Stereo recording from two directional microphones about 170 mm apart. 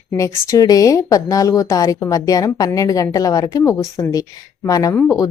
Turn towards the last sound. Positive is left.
turn(degrees=20)  # may be behind; listen again after turning